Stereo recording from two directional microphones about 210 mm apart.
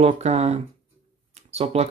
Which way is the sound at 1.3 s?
30° right (ahead or behind).